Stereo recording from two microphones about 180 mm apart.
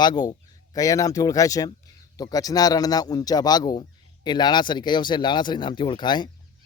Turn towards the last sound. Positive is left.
turn(degrees=25)  # may be behind; listen again after turning